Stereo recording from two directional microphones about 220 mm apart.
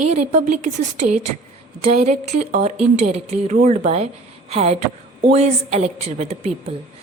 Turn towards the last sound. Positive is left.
turn(degrees=-30)  # may be behind; listen again after turning